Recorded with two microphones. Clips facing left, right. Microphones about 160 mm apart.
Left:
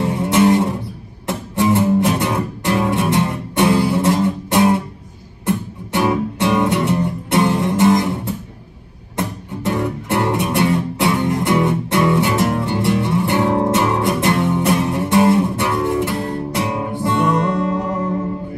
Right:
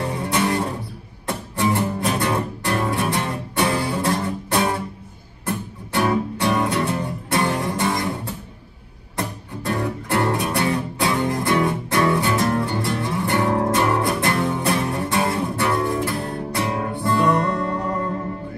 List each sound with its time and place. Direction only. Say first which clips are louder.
0.0 s music: left 7 dB; 25° left (ahead or behind)
9.1 s music: left 4 dB; 20° left (ahead or behind)
17.6 s music: left 4 dB; 5° left (ahead or behind)